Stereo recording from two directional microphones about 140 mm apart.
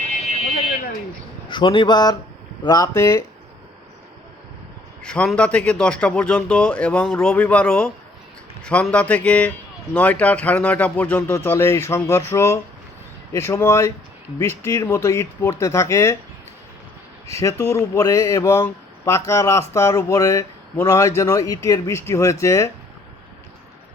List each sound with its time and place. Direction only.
1.5 s a man's voice: 35° left (ahead or behind)
5.0 s a man's voice: 5° left (ahead or behind)
17.2 s speech: 20° left (ahead or behind)